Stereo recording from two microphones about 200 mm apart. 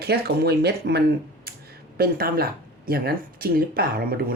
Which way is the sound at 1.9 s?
50° right (ahead or behind).